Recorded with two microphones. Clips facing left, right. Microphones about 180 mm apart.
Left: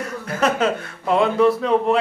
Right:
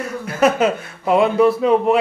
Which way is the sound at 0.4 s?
10° right (ahead or behind).